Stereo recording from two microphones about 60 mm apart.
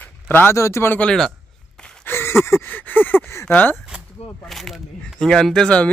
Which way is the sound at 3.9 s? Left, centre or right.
Right.